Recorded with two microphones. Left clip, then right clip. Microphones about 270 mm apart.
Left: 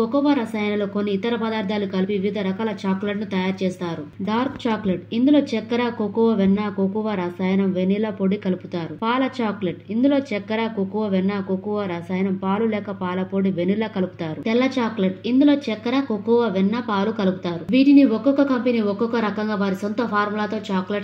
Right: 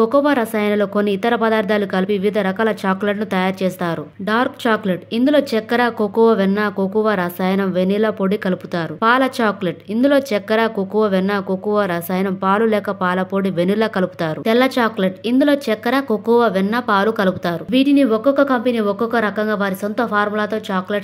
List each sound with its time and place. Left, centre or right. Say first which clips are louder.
0.0 s speech: right 6 dB; right
14.4 s speech: right 5 dB; right
15.3 s speech: right 2 dB; right